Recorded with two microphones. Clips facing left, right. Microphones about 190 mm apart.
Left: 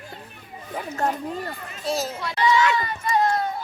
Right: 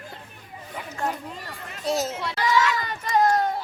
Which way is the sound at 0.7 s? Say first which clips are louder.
Left 4 dB; 45° left (ahead or behind).